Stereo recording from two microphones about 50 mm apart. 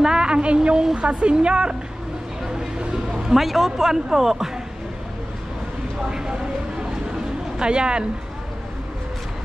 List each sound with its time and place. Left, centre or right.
0.0 s a woman's voice: centre
6.0 s a sound: centre
7.5 s speech: centre